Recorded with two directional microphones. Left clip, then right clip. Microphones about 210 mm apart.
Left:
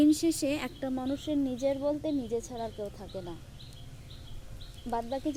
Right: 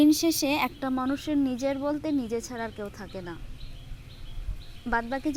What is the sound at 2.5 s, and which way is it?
Speech, 40° right (ahead or behind).